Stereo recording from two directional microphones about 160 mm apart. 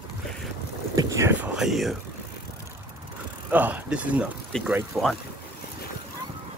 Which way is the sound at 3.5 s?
10° right (ahead or behind).